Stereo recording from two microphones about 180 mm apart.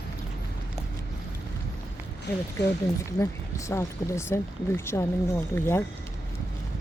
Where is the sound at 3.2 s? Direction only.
15° left (ahead or behind).